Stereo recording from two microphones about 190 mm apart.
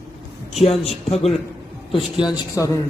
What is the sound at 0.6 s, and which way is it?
A man's voice, 30° left (ahead or behind).